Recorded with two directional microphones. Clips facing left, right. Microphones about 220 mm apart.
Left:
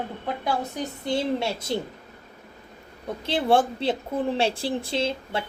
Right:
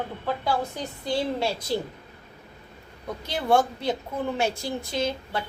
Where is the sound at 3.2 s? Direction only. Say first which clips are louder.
Left 2 dB; 30° left (ahead or behind).